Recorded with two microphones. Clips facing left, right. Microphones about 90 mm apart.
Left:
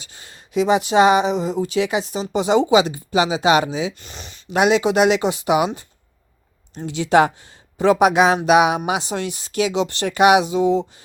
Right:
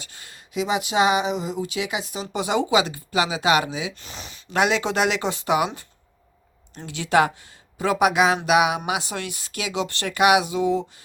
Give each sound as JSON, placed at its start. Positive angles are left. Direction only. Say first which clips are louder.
{"t": 0.0, "sound": "speech", "louder": "left 1 dB", "side_deg": 25}
{"t": 3.9, "sound": "speech", "louder": "even", "side_deg": 0}
{"t": 4.4, "sound": "speech", "louder": "left 5 dB", "side_deg": 20}